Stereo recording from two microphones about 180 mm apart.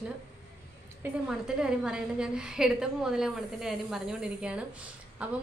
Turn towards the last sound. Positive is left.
turn(degrees=-5)  # may be behind; listen again after turning